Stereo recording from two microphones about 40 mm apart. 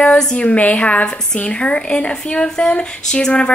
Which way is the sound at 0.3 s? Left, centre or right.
Left.